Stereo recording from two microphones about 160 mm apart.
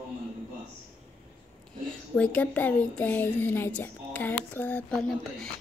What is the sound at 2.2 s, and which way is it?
Speech, 10° left (ahead or behind).